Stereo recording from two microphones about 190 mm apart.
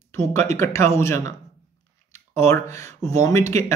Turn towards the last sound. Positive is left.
turn(degrees=15)  # may be behind; listen again after turning